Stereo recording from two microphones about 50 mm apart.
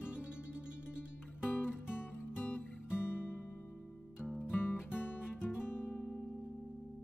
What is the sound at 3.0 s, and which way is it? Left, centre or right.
Music, left.